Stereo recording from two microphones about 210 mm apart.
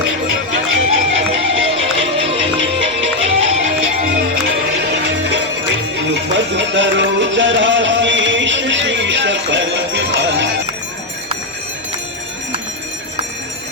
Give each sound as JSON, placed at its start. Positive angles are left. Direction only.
{"t": 0.5, "sound": "music", "side_deg": -70}
{"t": 4.8, "sound": "music", "side_deg": -50}